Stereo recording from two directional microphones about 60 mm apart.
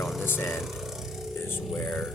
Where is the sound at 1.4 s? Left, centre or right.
Left.